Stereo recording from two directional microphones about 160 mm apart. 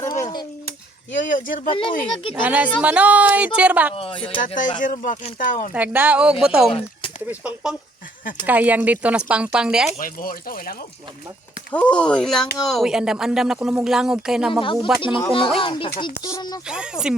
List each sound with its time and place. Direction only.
0.0 s a sound: 20° left (ahead or behind)
1.2 s speech: 55° left (ahead or behind)
1.7 s speech: 35° left (ahead or behind)
2.3 s speech: 10° right (ahead or behind)
3.9 s speech: 35° left (ahead or behind)
4.4 s speech: 55° left (ahead or behind)
5.7 s speech: 10° right (ahead or behind)
10.0 s speech: 65° left (ahead or behind)
11.7 s speech: 10° left (ahead or behind)
15.5 s speech: 35° left (ahead or behind)
16.6 s speech: 5° right (ahead or behind)